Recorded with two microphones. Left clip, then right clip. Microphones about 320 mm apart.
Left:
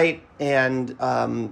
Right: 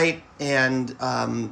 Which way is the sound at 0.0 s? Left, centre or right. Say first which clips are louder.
Left 2 dB; centre.